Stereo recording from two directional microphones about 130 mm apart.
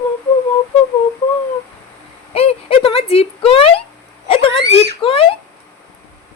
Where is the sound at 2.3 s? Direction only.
50° left (ahead or behind).